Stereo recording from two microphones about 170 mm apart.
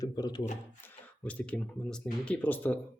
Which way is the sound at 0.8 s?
10° left (ahead or behind).